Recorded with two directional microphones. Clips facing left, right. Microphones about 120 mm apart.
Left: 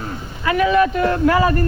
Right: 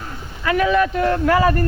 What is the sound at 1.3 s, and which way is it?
Speech, 20° left (ahead or behind).